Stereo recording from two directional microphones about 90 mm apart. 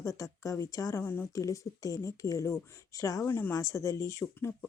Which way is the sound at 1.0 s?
25° left (ahead or behind).